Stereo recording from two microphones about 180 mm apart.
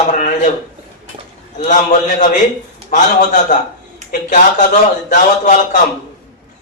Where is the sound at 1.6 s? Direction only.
45° left (ahead or behind).